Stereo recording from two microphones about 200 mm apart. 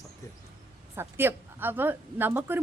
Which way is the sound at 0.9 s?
10° right (ahead or behind).